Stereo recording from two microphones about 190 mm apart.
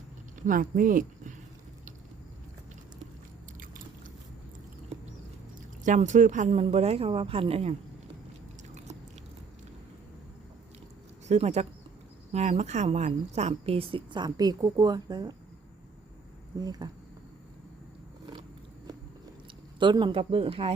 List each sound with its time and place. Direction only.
0.3 s speech: 45° right (ahead or behind)
5.8 s a woman's voice: 40° right (ahead or behind)
11.3 s a woman's voice: 35° right (ahead or behind); by 15.4 s 20° right (ahead or behind)
16.6 s speech: 20° right (ahead or behind)
19.8 s speech: 25° right (ahead or behind)